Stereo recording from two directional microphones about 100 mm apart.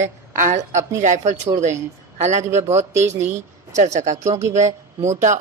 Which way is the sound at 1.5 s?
55° right (ahead or behind).